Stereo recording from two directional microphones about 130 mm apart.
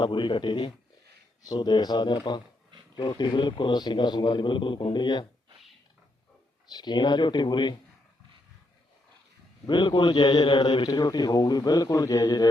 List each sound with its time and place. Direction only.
0.0 s a man's voice: 40° left (ahead or behind)
6.7 s a man's voice: 35° left (ahead or behind)
9.6 s a man's voice: 35° left (ahead or behind)